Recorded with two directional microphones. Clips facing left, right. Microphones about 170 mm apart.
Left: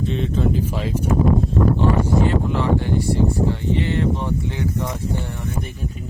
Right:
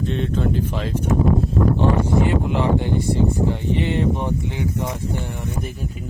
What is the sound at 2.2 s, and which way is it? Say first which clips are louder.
Speech: even; 15° right (ahead or behind).